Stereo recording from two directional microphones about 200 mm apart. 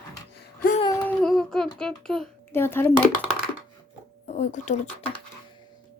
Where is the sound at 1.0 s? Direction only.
5° left (ahead or behind).